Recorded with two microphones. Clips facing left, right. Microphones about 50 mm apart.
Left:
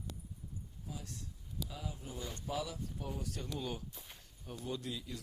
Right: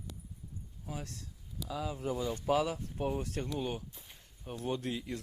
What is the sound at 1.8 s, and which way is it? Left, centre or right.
Speech, right.